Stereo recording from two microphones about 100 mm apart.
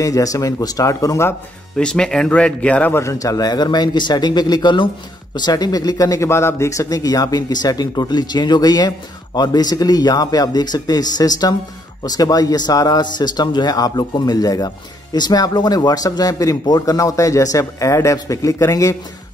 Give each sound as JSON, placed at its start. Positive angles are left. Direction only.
{"t": 0.0, "sound": "speech", "side_deg": 35}
{"t": 1.8, "sound": "speech", "side_deg": 10}
{"t": 3.0, "sound": "speech", "side_deg": 35}